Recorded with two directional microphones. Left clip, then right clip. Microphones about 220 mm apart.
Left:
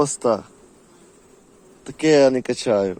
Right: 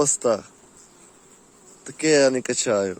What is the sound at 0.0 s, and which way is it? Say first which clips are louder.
Speech: left 1 dB; centre (ahead or behind).